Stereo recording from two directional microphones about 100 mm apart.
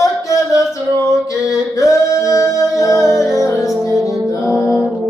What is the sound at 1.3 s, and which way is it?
Mantra, 30° left (ahead or behind).